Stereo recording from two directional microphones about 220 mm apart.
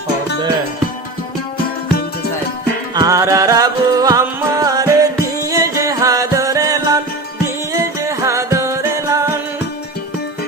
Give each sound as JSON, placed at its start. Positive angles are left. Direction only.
{"t": 2.9, "sound": "music", "side_deg": -15}